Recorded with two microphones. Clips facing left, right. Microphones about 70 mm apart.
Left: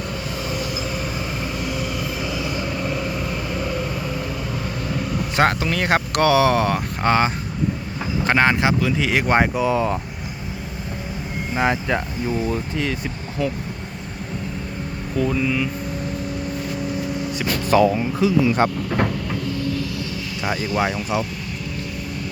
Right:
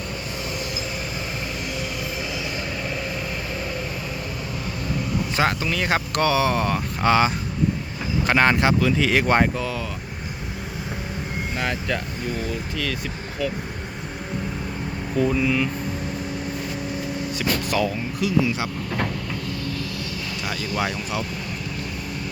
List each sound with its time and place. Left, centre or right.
5.4 s speech: left
7.0 s speech: left
8.3 s speech: centre
11.5 s speech: left
15.2 s speech: centre
17.7 s speech: left
20.4 s speech: left